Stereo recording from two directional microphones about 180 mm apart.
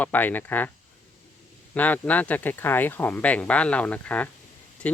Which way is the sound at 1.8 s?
10° left (ahead or behind).